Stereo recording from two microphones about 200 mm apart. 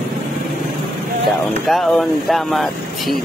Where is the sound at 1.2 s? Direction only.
Centre (ahead or behind).